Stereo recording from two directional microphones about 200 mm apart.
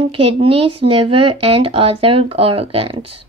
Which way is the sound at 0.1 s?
25° right (ahead or behind).